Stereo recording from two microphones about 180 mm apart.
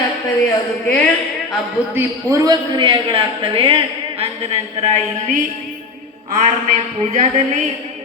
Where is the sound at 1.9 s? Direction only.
20° right (ahead or behind).